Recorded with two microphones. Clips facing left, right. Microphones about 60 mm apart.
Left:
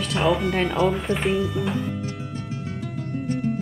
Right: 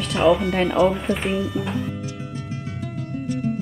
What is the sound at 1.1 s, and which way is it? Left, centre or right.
Speech, left.